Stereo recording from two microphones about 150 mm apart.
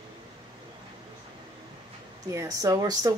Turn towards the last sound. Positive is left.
turn(degrees=-25)  # may be behind; listen again after turning